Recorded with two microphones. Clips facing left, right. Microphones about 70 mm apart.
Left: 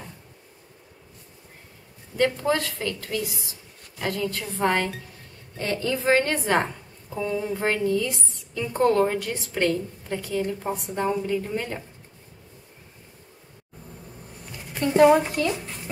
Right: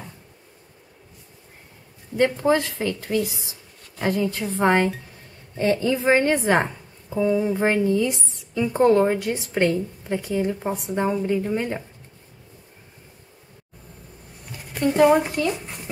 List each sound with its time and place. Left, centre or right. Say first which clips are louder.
2.1 s a woman's voice: right 3 dB; right
14.7 s speech: even; centre